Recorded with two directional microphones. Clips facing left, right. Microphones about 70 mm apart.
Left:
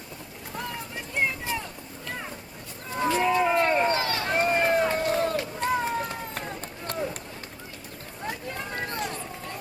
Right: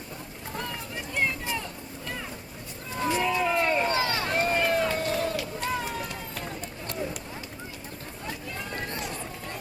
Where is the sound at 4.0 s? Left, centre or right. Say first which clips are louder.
Right 1 dB; right.